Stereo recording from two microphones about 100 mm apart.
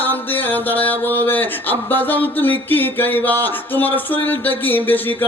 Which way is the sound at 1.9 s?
20° left (ahead or behind).